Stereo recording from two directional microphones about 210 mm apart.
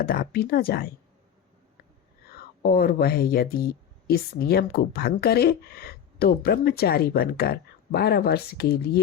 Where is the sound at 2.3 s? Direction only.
45° left (ahead or behind).